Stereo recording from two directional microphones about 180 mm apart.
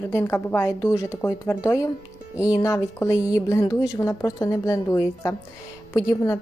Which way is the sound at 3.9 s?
20° left (ahead or behind).